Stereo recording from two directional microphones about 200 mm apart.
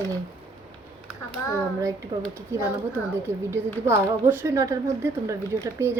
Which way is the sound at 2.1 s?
20° right (ahead or behind).